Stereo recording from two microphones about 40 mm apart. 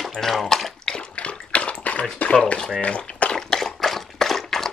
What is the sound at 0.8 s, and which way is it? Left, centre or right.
Bathtub, left.